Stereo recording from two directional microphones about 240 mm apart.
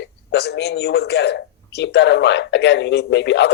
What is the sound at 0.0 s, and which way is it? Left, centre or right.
A man's voice, left.